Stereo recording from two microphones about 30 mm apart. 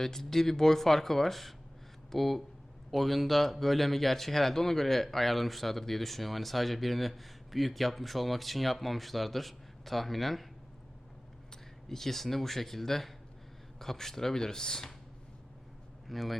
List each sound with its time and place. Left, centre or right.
0.0 s speech: centre
11.9 s speech: centre
16.0 s speech: centre